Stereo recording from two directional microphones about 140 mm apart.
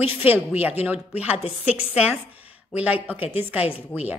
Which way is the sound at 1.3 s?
45° left (ahead or behind).